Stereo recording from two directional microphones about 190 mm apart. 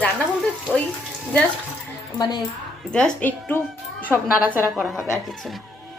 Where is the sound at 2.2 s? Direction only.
20° left (ahead or behind).